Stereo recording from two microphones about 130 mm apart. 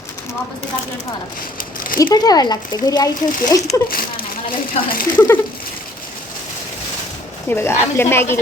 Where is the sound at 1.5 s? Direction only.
90° left.